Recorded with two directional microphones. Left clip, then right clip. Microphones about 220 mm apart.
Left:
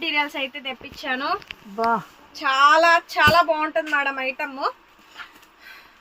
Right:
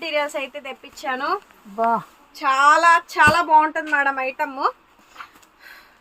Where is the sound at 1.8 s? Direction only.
10° left (ahead or behind).